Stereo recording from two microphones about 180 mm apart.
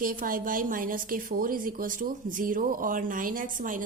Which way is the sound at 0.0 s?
50° right (ahead or behind).